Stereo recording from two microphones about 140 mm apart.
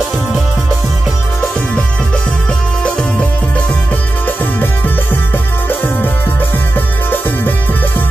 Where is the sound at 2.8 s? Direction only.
5° left (ahead or behind).